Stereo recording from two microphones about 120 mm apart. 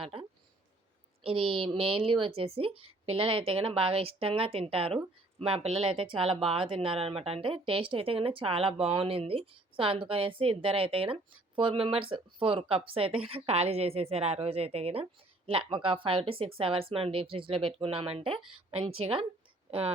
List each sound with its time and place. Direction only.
0.0 s a woman's voice: 50° right (ahead or behind)